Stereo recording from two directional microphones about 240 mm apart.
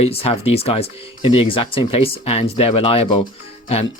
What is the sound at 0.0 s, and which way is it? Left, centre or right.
Speech, left.